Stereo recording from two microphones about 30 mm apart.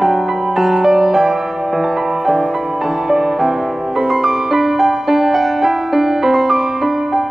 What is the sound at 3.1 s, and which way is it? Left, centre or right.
Music, centre.